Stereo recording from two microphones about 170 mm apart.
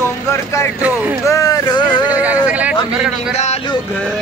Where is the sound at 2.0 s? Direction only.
10° right (ahead or behind).